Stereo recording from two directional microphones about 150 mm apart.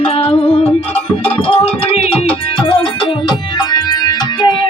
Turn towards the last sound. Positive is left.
turn(degrees=30)  # may be behind; listen again after turning